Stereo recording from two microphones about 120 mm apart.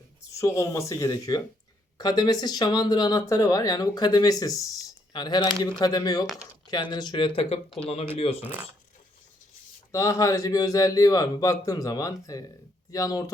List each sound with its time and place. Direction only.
0.3 s a man's voice: 25° left (ahead or behind); by 8.4 s 55° left (ahead or behind)
9.9 s a man's voice: 25° left (ahead or behind)